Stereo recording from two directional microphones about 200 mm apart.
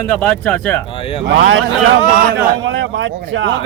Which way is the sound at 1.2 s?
70° right (ahead or behind).